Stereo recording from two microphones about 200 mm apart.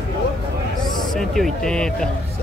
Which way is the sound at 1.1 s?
Centre (ahead or behind).